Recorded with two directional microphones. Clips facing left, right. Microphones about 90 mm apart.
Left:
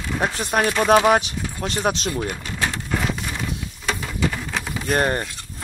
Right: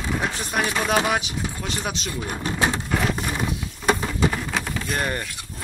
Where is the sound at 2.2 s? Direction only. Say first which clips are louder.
Right 1 dB; 35° right (ahead or behind).